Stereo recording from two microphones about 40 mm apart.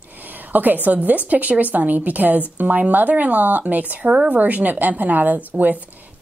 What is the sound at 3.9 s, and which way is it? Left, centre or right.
A woman's voice, right.